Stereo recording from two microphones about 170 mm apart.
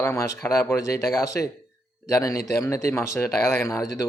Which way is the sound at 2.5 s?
15° left (ahead or behind).